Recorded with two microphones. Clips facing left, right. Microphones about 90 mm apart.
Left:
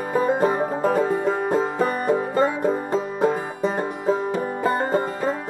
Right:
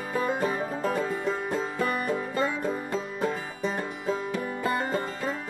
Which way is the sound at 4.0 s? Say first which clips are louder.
Left 8 dB; 35° left (ahead or behind).